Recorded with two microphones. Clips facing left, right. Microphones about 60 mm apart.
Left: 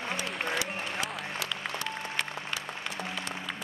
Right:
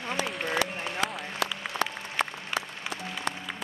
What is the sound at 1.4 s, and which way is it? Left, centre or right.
Applause, right.